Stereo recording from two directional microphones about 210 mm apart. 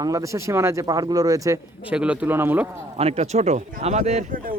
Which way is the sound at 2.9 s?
30° right (ahead or behind).